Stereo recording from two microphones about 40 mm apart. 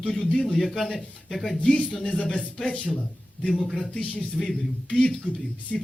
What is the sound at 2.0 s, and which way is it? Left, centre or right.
Speech, left.